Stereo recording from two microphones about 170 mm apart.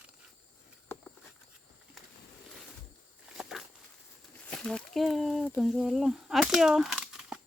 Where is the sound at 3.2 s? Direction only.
5° right (ahead or behind).